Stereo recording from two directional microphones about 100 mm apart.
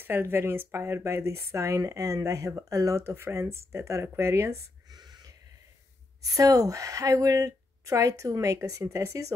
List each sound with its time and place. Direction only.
0.0 s speech: 20° right (ahead or behind)
4.8 s a sound: 40° right (ahead or behind)
6.2 s a woman's voice: 35° right (ahead or behind)